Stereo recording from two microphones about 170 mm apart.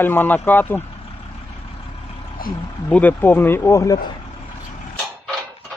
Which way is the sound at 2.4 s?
60° left (ahead or behind).